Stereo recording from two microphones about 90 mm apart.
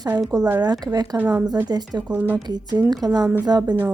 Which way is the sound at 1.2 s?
15° right (ahead or behind).